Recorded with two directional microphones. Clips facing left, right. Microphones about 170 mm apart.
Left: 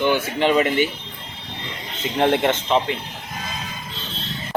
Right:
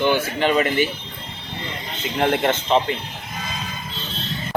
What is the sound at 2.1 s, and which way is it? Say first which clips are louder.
Speech: left 1 dB; 25° left (ahead or behind).